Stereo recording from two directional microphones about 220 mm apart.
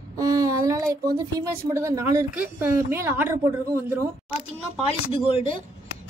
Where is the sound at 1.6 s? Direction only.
15° right (ahead or behind).